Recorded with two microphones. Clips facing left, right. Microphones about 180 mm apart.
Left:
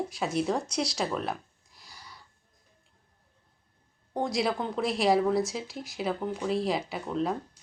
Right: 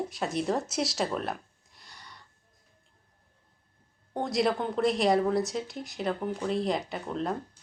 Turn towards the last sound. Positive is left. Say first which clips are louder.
# left 2 dB
turn(degrees=0)  # may be behind; listen again after turning